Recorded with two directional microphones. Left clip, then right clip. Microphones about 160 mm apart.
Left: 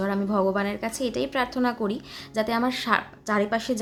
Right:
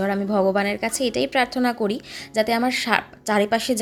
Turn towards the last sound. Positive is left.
turn(degrees=-20)  # may be behind; listen again after turning